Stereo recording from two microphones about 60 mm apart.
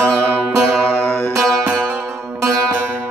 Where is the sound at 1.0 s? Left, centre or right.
Left.